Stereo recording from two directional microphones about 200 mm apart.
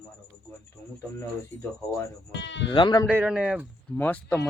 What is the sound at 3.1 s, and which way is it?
Speech, 5° right (ahead or behind).